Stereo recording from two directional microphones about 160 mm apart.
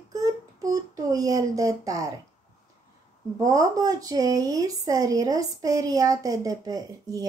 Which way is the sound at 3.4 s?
20° right (ahead or behind).